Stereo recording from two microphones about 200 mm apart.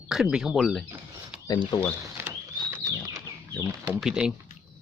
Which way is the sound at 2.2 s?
10° right (ahead or behind).